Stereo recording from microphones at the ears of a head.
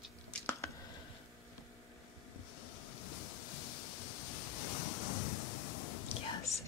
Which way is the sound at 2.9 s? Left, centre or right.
Left.